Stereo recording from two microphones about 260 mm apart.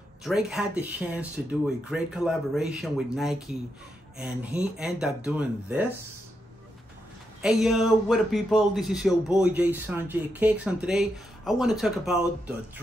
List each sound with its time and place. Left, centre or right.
0.2 s speech: centre
7.4 s speech: centre